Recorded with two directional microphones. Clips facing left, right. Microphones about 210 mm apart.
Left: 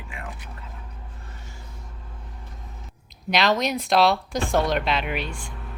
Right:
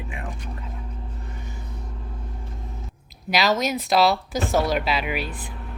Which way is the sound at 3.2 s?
5° right (ahead or behind).